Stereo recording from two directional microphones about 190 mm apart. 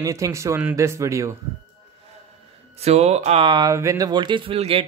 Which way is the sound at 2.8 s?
35° right (ahead or behind).